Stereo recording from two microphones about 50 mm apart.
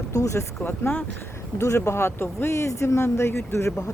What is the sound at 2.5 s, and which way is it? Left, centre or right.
Speech, left.